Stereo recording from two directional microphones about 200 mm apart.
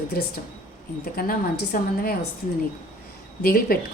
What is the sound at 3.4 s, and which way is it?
Speech, 50° left (ahead or behind).